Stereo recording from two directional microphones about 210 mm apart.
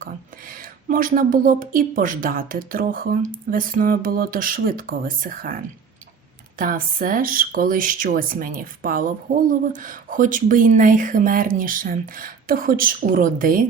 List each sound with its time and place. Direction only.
0.0 s speech: 40° right (ahead or behind)
6.6 s speech: 40° right (ahead or behind)